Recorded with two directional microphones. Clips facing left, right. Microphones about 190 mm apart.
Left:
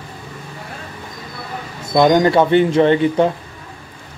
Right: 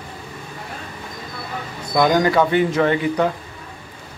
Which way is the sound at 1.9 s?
25° left (ahead or behind).